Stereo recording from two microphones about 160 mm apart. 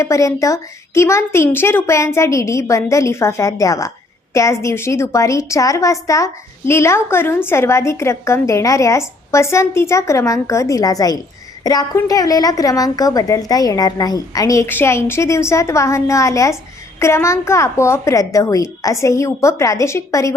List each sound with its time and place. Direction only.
0.0 s a woman's voice: 20° left (ahead or behind)